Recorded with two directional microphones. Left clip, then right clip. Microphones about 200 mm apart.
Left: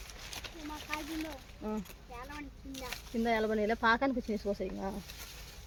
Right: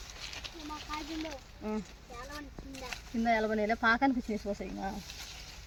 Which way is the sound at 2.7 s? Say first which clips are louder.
Left 1 dB; 50° left (ahead or behind).